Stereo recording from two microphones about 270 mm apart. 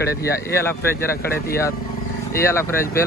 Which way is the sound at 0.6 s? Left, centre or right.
Centre.